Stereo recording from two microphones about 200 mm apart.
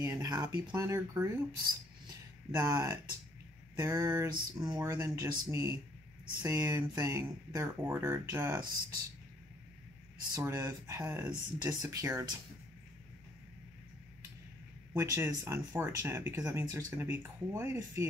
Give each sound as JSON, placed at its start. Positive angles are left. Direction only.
{"t": 0.0, "sound": "speech", "side_deg": -15}
{"t": 2.5, "sound": "speech", "side_deg": -15}
{"t": 10.3, "sound": "speech", "side_deg": -15}
{"t": 15.0, "sound": "speech", "side_deg": -15}